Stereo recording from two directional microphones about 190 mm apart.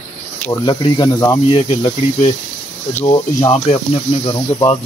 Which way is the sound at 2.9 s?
15° left (ahead or behind).